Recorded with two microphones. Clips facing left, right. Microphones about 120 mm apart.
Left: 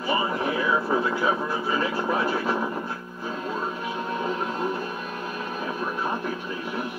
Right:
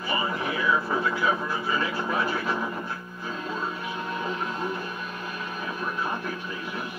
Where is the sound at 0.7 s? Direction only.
25° left (ahead or behind).